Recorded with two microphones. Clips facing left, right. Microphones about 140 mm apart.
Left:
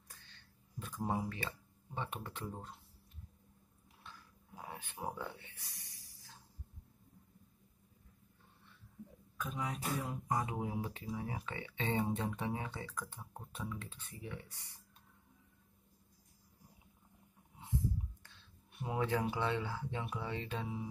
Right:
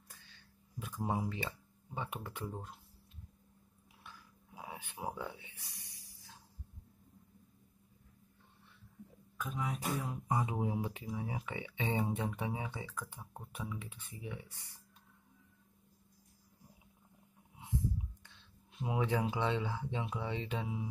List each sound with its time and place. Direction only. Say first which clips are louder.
0.3 s a sound: right 1 dB; 10° right (ahead or behind)
2.0 s speech: right 1 dB; 10° right (ahead or behind)
4.0 s a sound: even; 10° right (ahead or behind)
9.4 s speech: right 1 dB; centre (ahead or behind)
10.2 s speech: right 4 dB; 15° right (ahead or behind)
18.2 s speech: right 1 dB; 20° right (ahead or behind)